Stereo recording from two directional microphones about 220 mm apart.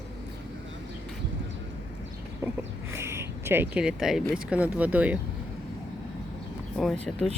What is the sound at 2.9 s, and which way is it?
Speech, 10° right (ahead or behind).